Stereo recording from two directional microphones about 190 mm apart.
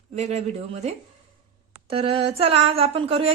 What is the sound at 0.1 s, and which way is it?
Speech, 35° right (ahead or behind).